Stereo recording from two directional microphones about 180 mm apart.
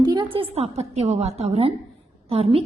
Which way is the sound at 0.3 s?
35° right (ahead or behind).